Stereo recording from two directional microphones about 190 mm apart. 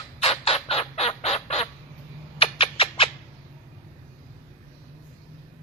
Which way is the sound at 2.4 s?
30° left (ahead or behind).